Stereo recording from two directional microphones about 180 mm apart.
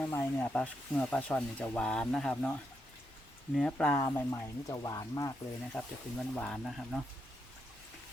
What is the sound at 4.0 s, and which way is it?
Speech, 20° left (ahead or behind).